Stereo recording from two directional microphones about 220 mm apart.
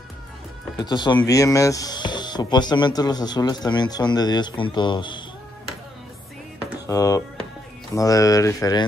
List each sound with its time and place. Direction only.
0.7 s speech: 20° left (ahead or behind)
6.9 s speech: 15° left (ahead or behind)